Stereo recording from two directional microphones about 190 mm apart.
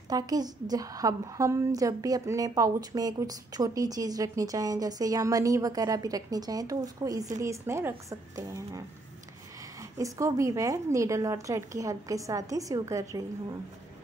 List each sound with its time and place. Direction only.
0.1 s a woman's voice: 20° right (ahead or behind)